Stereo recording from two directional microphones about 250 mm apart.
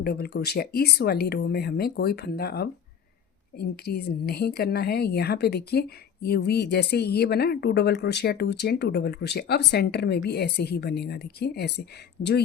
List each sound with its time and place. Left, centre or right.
0.0 s speech: left